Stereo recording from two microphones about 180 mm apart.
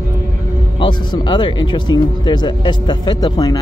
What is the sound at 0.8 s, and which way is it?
Speech, 25° left (ahead or behind).